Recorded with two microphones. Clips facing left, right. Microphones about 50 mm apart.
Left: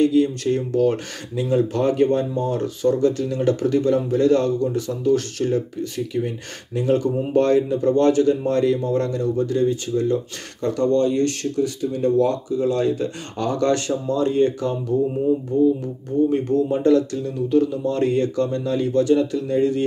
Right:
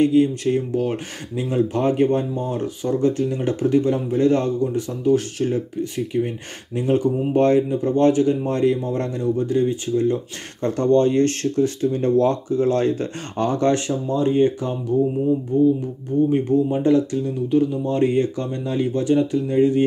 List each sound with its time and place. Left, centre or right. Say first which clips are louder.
0.0 s speech: right 1 dB; right